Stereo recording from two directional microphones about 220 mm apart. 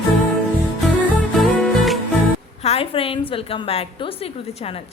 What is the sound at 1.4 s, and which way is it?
Music, centre (ahead or behind).